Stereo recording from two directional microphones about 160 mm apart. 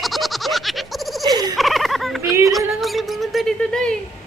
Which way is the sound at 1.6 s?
Centre (ahead or behind).